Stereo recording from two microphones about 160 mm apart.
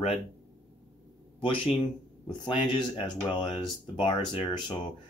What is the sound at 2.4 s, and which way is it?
Speech, 30° left (ahead or behind).